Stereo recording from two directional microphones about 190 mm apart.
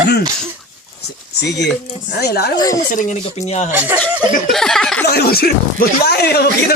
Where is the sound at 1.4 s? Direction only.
65° left (ahead or behind).